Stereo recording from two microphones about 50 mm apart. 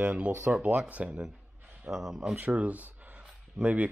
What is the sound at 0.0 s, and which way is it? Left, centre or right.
Speech, right.